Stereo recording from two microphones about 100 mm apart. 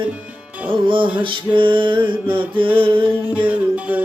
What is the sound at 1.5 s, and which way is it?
Music, 55° right (ahead or behind).